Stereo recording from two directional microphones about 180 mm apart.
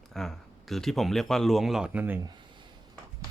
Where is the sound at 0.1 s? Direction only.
Centre (ahead or behind).